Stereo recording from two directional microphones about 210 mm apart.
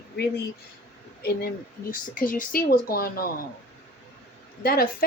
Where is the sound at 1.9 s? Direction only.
40° left (ahead or behind).